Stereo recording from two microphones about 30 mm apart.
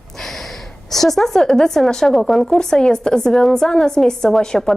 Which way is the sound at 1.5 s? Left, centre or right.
Centre.